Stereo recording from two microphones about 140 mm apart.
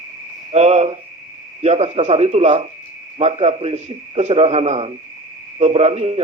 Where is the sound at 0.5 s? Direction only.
50° right (ahead or behind).